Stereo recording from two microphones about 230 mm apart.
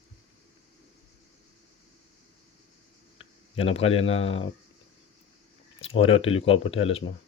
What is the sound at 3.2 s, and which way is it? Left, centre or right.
Speech, left.